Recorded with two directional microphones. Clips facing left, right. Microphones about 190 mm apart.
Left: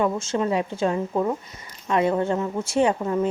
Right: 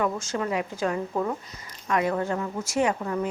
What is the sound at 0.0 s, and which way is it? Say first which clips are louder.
A woman's voice: left 4 dB; 25° left (ahead or behind).